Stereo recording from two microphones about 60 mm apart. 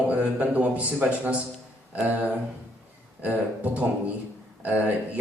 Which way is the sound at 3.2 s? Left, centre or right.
Right.